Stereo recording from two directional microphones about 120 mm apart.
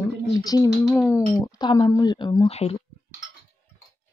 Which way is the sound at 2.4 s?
60° left (ahead or behind).